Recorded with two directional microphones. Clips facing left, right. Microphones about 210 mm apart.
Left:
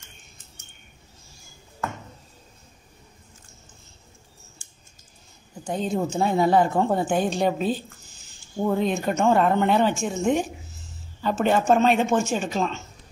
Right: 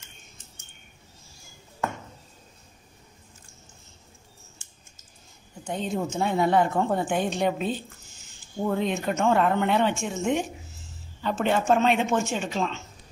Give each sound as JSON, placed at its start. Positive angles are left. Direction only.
{"t": 5.7, "sound": "speech", "side_deg": 40}